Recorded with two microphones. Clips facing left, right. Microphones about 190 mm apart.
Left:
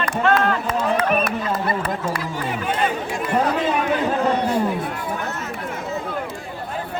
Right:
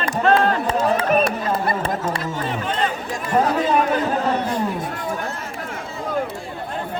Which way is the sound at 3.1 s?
45° right (ahead or behind).